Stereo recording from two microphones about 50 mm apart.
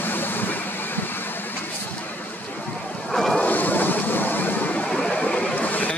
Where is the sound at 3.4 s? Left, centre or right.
Left.